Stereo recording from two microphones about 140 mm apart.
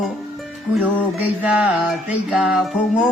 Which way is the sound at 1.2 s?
10° right (ahead or behind).